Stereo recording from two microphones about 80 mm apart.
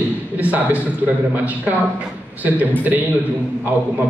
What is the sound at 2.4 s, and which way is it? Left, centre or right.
Speech, right.